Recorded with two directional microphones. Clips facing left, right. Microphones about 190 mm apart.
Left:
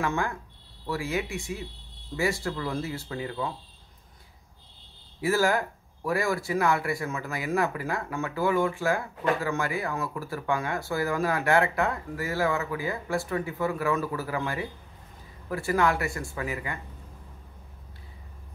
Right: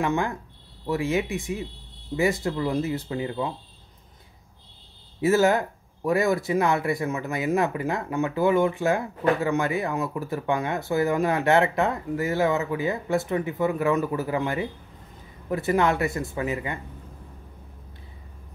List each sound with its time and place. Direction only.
0.0 s speech: 20° right (ahead or behind)
5.2 s speech: 20° right (ahead or behind)